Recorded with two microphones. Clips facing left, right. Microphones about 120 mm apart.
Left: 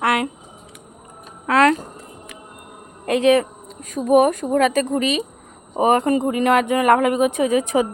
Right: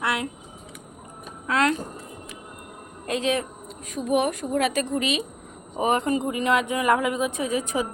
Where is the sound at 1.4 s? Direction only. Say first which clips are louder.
Left 7 dB; 75° left (ahead or behind).